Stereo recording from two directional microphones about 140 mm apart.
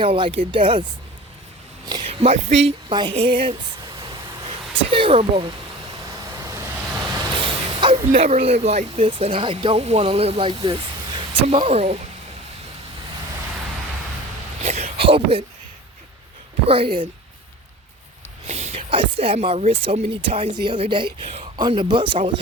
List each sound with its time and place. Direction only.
0.0 s speech: 40° right (ahead or behind)
2.0 s speech: 45° right (ahead or behind)
2.9 s speech: 35° right (ahead or behind)
4.4 s a sound: 40° right (ahead or behind)
6.1 s vehicle: 25° right (ahead or behind); by 7.9 s 40° right (ahead or behind)
8.2 s speech: 45° right (ahead or behind)
14.6 s a sound: 50° right (ahead or behind)
16.6 s speech: 40° right (ahead or behind)
18.4 s speech: 50° right (ahead or behind)